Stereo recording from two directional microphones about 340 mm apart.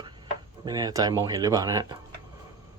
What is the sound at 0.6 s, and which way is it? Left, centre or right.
Speech, centre.